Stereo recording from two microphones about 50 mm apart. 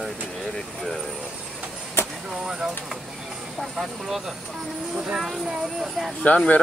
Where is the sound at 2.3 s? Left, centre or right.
Centre.